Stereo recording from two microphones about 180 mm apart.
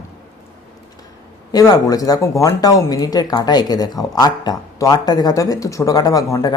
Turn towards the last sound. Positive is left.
turn(degrees=20)  # may be behind; listen again after turning